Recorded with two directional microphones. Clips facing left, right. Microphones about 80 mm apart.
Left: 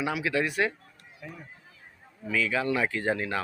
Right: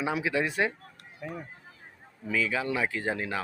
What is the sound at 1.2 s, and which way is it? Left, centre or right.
Speech, right.